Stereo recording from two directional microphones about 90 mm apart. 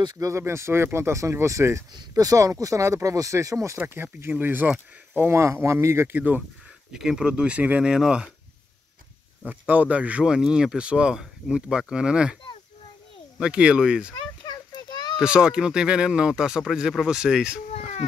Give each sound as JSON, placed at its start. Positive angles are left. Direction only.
{"t": 0.0, "sound": "speech", "side_deg": -45}
{"t": 0.3, "sound": "speech", "side_deg": -30}
{"t": 3.7, "sound": "speech", "side_deg": -25}
{"t": 6.1, "sound": "speech", "side_deg": -20}
{"t": 6.9, "sound": "speech", "side_deg": -5}
{"t": 9.5, "sound": "speech", "side_deg": -20}
{"t": 13.4, "sound": "speech", "side_deg": -10}
{"t": 14.4, "sound": "a sound", "side_deg": 50}
{"t": 15.1, "sound": "speech", "side_deg": -10}